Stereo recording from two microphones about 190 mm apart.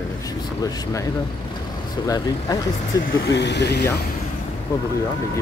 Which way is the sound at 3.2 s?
65° left (ahead or behind).